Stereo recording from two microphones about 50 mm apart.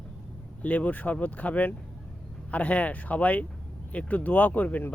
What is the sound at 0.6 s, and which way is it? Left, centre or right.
Speech, left.